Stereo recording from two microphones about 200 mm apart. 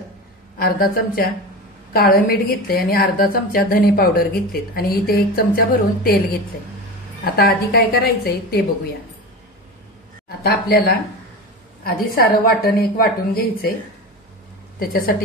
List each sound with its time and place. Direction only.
0.6 s a woman's voice: 50° left (ahead or behind)
7.2 s a woman's voice: 50° left (ahead or behind)
10.4 s a woman's voice: 50° left (ahead or behind)
14.8 s a woman's voice: 45° left (ahead or behind)